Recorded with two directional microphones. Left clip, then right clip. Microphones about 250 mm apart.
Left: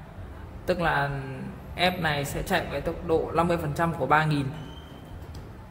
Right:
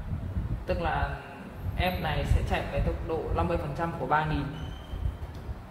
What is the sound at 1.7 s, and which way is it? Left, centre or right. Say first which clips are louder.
A man's voice: left 5 dB; left.